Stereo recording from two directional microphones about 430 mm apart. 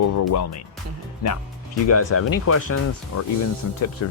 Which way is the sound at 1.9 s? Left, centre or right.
Left.